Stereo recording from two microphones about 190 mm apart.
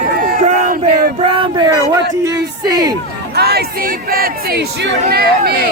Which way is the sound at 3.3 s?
55° right (ahead or behind).